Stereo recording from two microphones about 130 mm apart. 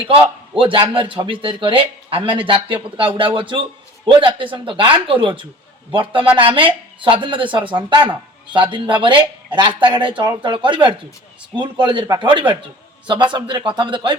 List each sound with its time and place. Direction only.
0.0 s a man's voice: 45° right (ahead or behind)